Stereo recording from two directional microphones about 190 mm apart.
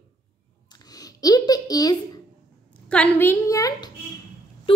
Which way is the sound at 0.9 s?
20° left (ahead or behind).